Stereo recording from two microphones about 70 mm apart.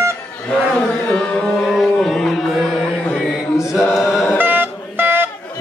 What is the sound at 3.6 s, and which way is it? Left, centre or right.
Chant, left.